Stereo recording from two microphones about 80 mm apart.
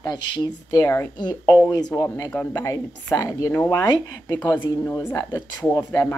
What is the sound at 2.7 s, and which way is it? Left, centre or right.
A woman's voice, left.